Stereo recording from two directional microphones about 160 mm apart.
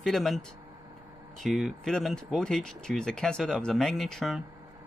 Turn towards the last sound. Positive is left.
turn(degrees=0)  # may be behind; listen again after turning